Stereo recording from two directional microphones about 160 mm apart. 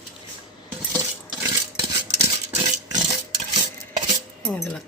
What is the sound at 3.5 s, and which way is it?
Stir, 45° right (ahead or behind).